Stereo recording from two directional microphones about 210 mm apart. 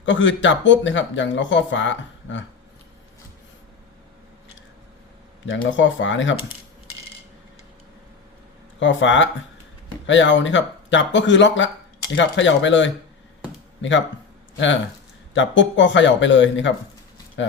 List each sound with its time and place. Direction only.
0.0 s speech: 60° left (ahead or behind)
5.5 s speech: 60° left (ahead or behind)
8.8 s speech: 65° left (ahead or behind)
15.4 s speech: 60° left (ahead or behind)